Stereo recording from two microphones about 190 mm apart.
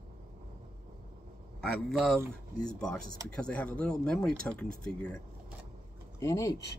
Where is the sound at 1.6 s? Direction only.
Centre (ahead or behind).